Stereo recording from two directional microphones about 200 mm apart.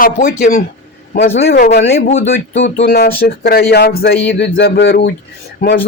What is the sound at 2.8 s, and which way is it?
Speech, 50° left (ahead or behind).